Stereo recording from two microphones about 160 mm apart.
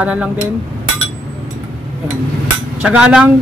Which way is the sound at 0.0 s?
5° right (ahead or behind).